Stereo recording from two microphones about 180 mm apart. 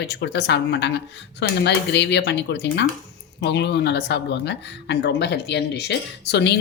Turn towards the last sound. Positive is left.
turn(degrees=70)  # may be behind; listen again after turning